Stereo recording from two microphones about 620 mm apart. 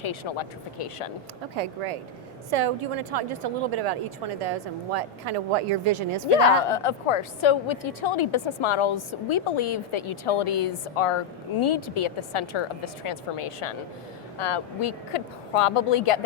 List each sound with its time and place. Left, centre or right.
0.0 s a woman's voice: left
1.5 s speech: right
2.5 s a woman's voice: right
6.2 s a woman's voice: left